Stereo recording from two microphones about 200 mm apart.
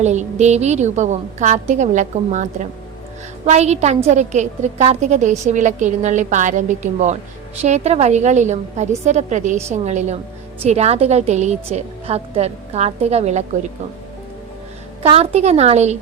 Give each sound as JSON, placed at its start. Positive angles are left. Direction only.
{"t": 0.0, "sound": "a woman's voice", "side_deg": -35}
{"t": 15.0, "sound": "a woman's voice", "side_deg": -30}